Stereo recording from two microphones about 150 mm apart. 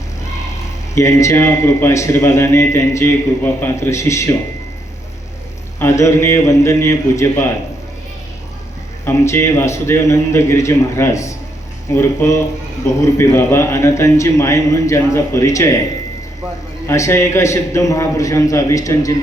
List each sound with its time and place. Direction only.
0.9 s a man's voice: 20° left (ahead or behind)
5.8 s a man's voice: 20° left (ahead or behind)
9.0 s a man's voice: 20° left (ahead or behind)
16.8 s a man's voice: 20° left (ahead or behind)